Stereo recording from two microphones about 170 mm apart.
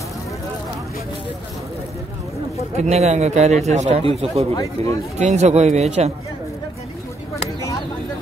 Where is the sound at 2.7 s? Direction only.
40° right (ahead or behind).